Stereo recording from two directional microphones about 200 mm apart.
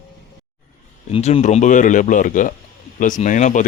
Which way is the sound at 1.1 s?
30° left (ahead or behind).